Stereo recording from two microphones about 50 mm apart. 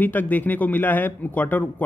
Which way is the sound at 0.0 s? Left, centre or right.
Left.